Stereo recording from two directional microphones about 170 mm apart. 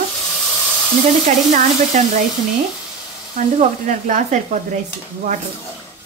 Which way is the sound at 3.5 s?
45° right (ahead or behind).